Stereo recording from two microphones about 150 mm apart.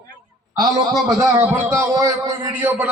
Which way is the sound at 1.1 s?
20° right (ahead or behind).